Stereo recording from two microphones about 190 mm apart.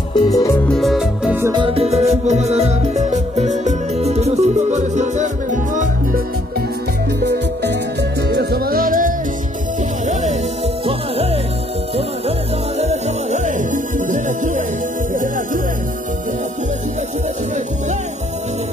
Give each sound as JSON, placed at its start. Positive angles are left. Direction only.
{"t": 0.1, "sound": "music", "side_deg": 20}
{"t": 0.7, "sound": "music", "side_deg": 0}
{"t": 1.5, "sound": "music", "side_deg": -25}
{"t": 8.3, "sound": "music", "side_deg": -60}
{"t": 12.3, "sound": "music", "side_deg": -35}